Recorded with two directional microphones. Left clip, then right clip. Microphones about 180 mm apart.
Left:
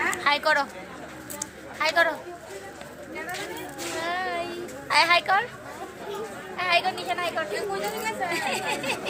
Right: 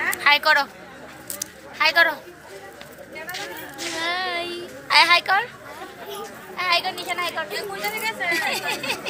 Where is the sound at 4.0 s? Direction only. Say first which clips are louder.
Right 3 dB; 10° right (ahead or behind).